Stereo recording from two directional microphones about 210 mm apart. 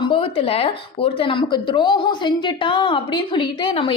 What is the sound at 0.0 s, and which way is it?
A woman's voice, 25° left (ahead or behind).